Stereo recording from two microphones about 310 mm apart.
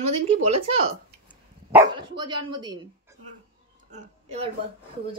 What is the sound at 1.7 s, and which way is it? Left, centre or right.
Speech, centre.